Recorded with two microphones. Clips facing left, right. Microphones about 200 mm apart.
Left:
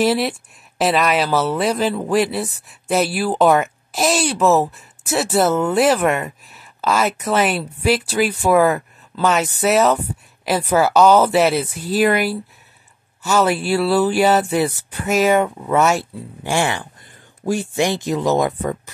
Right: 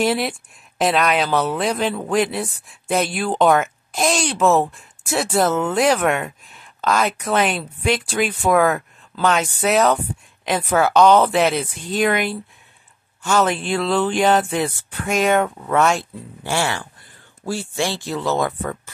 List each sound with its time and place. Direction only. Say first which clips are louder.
0.0 s speech: left 2 dB; centre (ahead or behind); by 18.8 s 15° left (ahead or behind)